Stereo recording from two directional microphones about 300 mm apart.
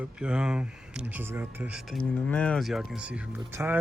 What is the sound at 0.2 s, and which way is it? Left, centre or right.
Speech, centre.